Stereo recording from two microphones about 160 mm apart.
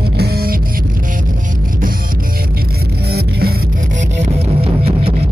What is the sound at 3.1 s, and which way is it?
Music, 75° right (ahead or behind).